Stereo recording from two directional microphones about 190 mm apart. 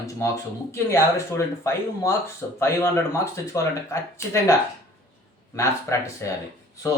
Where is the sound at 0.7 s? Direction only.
15° left (ahead or behind).